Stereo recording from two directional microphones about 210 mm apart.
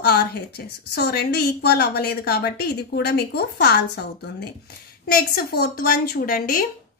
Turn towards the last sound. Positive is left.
turn(degrees=40)  # may be behind; listen again after turning